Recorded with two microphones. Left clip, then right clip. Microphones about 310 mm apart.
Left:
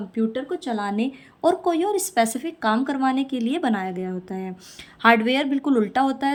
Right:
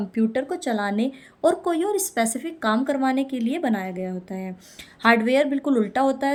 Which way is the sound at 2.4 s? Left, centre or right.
Left.